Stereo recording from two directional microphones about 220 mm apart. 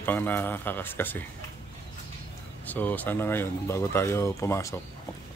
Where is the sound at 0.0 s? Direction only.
10° left (ahead or behind).